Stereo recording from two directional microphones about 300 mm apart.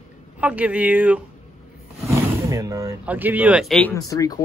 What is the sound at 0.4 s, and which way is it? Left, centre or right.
Speech, centre.